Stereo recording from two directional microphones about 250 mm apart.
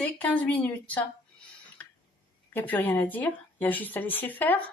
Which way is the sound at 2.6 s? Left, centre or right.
Centre.